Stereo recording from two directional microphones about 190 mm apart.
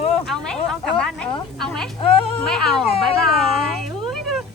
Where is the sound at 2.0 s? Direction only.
25° left (ahead or behind).